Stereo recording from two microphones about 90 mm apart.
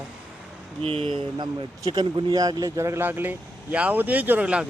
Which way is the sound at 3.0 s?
20° right (ahead or behind).